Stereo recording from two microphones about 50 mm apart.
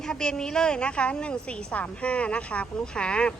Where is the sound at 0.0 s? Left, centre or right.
Centre.